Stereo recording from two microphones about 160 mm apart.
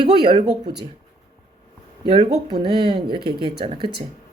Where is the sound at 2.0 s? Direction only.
35° right (ahead or behind).